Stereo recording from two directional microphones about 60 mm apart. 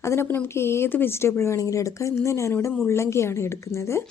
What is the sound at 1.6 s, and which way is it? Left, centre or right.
Speech, left.